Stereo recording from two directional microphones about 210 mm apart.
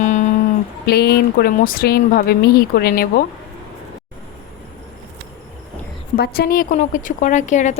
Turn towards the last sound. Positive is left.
turn(degrees=35)  # may be behind; listen again after turning